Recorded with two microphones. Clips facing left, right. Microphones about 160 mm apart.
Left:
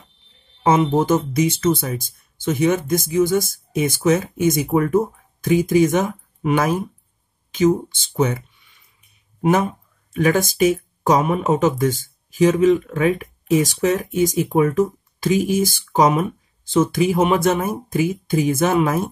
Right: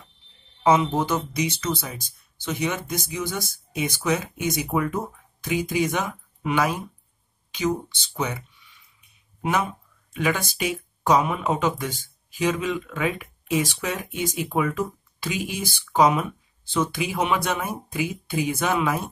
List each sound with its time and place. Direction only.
0.7 s speech: 50° left (ahead or behind)
9.4 s a sound: 45° left (ahead or behind)
10.6 s speech: 45° left (ahead or behind)